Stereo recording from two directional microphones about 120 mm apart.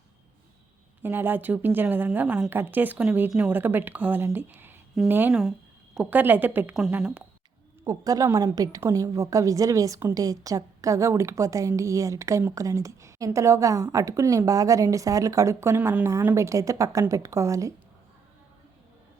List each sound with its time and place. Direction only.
1.0 s speech: 15° right (ahead or behind)
5.3 s a sound: centre (ahead or behind)
6.1 s speech: 15° right (ahead or behind)
7.9 s a woman's voice: 30° right (ahead or behind)